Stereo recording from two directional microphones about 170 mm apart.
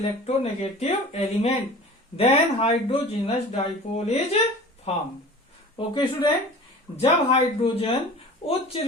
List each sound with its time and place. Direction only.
0.3 s speech: 35° left (ahead or behind)